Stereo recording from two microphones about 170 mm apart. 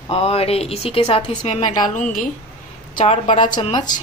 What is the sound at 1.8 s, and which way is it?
Speech, 50° left (ahead or behind).